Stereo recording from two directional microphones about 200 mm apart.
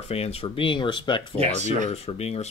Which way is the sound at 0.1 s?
30° left (ahead or behind).